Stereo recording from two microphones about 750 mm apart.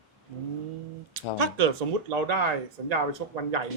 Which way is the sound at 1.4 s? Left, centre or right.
Right.